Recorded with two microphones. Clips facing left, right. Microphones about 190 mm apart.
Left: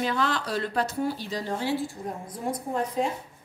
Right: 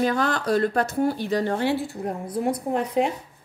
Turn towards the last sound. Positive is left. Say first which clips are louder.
# right 4 dB
turn(degrees=-70)  # may be behind; listen again after turning